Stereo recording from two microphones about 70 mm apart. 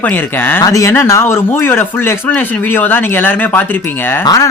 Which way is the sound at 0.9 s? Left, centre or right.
Left.